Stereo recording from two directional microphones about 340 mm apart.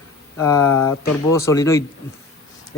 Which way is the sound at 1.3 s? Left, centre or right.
Centre.